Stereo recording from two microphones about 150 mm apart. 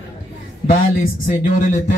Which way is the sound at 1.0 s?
60° left (ahead or behind).